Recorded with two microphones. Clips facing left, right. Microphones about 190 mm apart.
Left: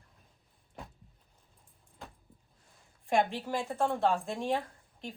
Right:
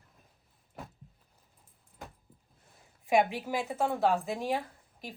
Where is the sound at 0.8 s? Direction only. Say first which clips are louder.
Right 2 dB; 5° right (ahead or behind).